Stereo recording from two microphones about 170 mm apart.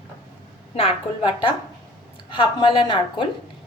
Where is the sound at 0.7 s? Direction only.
30° left (ahead or behind).